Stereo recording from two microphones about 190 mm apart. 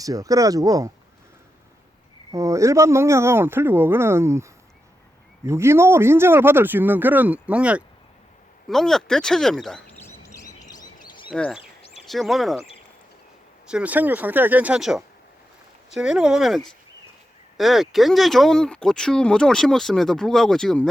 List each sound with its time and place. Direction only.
0.0 s speech: 15° right (ahead or behind)
2.3 s speech: 15° right (ahead or behind)
5.5 s speech: 15° right (ahead or behind); by 10.5 s 15° left (ahead or behind)
10.7 s bird: 20° left (ahead or behind)
11.3 s speech: 5° left (ahead or behind)
13.7 s speech: 5° right (ahead or behind)